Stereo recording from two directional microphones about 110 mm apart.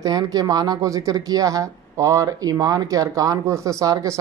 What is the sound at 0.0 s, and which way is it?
Speech, 35° right (ahead or behind).